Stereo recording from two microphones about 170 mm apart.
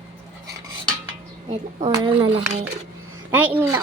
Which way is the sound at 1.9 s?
30° right (ahead or behind).